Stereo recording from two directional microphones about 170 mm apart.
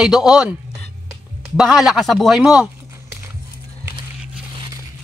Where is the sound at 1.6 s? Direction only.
Centre (ahead or behind).